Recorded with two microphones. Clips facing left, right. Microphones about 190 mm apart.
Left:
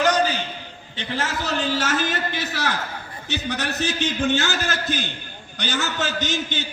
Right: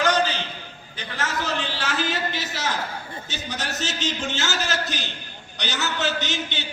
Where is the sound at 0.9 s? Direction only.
30° left (ahead or behind).